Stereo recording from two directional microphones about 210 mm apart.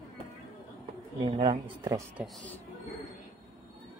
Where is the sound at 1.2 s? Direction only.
25° right (ahead or behind).